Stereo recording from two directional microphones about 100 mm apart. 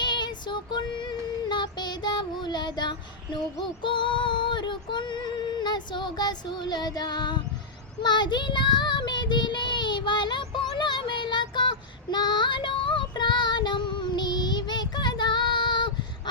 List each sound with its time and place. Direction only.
0.0 s child singing: 45° left (ahead or behind)
3.8 s female singing: 55° left (ahead or behind)
8.0 s child singing: 50° left (ahead or behind)
12.1 s female singing: 50° left (ahead or behind)